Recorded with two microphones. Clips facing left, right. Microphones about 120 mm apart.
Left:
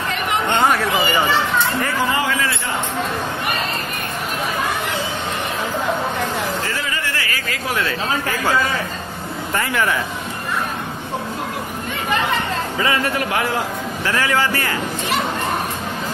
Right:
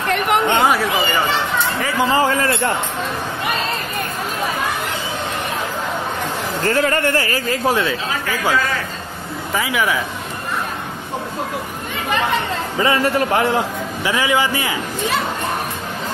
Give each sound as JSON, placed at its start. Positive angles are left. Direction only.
{"t": 0.1, "sound": "a sound", "side_deg": -60}
{"t": 2.0, "sound": "a man's voice", "side_deg": -40}
{"t": 6.6, "sound": "speech", "side_deg": -55}
{"t": 9.5, "sound": "speech", "side_deg": -5}
{"t": 12.8, "sound": "a man's voice", "side_deg": -30}
{"t": 14.0, "sound": "a man's voice", "side_deg": -15}